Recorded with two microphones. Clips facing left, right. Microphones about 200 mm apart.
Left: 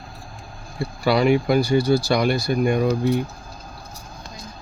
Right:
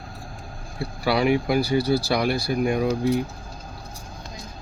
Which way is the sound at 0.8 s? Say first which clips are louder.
Left 3 dB; 5° right (ahead or behind).